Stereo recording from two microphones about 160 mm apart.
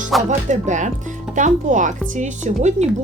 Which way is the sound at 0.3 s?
50° right (ahead or behind).